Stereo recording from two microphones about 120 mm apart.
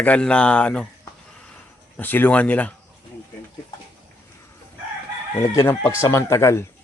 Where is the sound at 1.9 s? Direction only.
15° left (ahead or behind).